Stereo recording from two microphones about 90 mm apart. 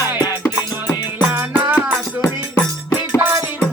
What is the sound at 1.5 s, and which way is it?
Music, 15° right (ahead or behind).